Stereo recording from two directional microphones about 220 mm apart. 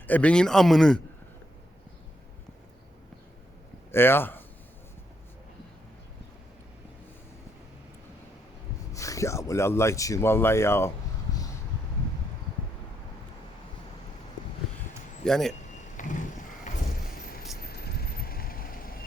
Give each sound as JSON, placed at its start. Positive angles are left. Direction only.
{"t": 0.1, "sound": "speech", "side_deg": 5}
{"t": 3.9, "sound": "speech", "side_deg": 10}
{"t": 8.9, "sound": "speech", "side_deg": 15}
{"t": 15.2, "sound": "speech", "side_deg": 0}
{"t": 16.0, "sound": "vehicle", "side_deg": 35}
{"t": 17.6, "sound": "vehicle", "side_deg": 45}